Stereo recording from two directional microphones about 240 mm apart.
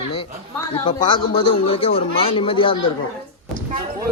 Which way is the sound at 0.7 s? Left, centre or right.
Centre.